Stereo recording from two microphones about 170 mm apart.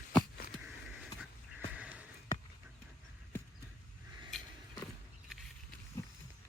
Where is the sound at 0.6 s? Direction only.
5° right (ahead or behind).